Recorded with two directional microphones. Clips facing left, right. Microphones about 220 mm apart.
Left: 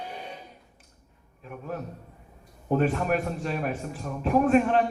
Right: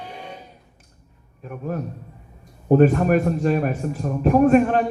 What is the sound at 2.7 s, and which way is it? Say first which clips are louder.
A man's voice: right 9 dB; 45° right (ahead or behind).